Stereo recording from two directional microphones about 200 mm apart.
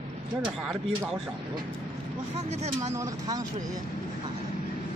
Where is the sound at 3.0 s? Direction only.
15° right (ahead or behind).